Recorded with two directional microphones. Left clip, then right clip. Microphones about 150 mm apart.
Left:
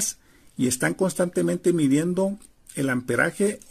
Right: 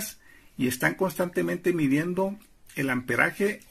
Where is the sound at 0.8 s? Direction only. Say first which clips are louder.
Left 2 dB; 35° left (ahead or behind).